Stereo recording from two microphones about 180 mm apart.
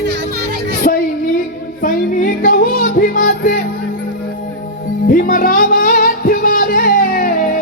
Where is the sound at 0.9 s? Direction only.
45° left (ahead or behind).